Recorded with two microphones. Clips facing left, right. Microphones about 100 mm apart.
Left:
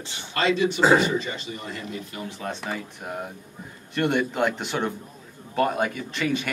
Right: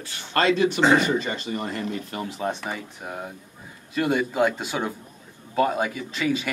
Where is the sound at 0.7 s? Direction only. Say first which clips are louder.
Even; 5° left (ahead or behind).